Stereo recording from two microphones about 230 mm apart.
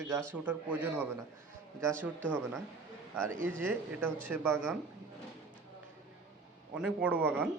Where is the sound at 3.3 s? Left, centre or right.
Right.